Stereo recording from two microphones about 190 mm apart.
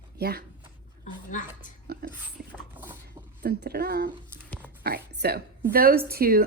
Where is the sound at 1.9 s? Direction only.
50° right (ahead or behind).